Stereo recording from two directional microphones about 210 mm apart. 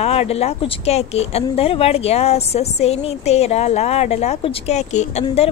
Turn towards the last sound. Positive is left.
turn(degrees=30)  # may be behind; listen again after turning